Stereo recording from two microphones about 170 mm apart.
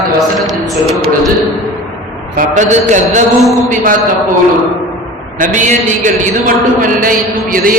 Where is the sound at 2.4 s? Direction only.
50° right (ahead or behind).